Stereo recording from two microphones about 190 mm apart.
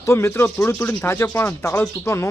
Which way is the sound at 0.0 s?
15° left (ahead or behind).